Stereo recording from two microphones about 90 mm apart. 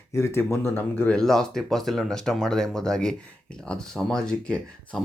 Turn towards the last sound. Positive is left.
turn(degrees=10)  # may be behind; listen again after turning